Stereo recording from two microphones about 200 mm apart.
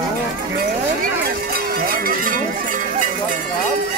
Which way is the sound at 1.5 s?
50° right (ahead or behind).